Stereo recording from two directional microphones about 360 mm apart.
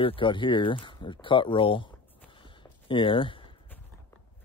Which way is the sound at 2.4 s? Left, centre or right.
Centre.